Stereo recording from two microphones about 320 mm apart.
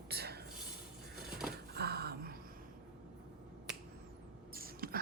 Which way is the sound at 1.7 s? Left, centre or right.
Right.